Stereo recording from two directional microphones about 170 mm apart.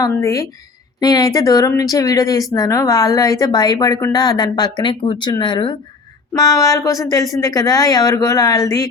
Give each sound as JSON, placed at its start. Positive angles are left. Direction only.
{"t": 0.0, "sound": "speech", "side_deg": 20}